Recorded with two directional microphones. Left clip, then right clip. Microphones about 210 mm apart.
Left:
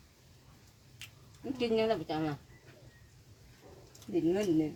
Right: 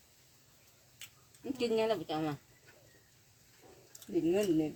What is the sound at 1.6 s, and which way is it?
Speech, 25° right (ahead or behind).